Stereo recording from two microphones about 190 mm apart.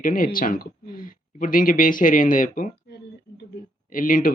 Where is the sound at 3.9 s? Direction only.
45° left (ahead or behind).